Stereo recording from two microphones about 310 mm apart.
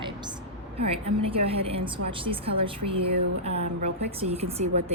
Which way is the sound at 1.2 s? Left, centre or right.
Centre.